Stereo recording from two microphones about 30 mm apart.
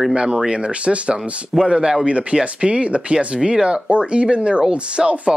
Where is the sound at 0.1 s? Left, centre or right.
Right.